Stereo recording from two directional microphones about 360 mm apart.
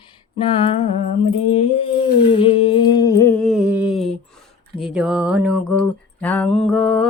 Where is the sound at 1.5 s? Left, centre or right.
Centre.